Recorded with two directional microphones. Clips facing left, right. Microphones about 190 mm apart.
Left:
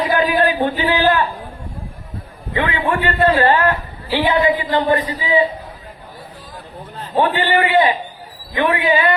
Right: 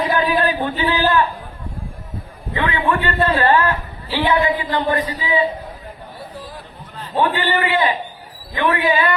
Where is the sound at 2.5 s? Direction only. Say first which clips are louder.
Left 1 dB; 25° left (ahead or behind).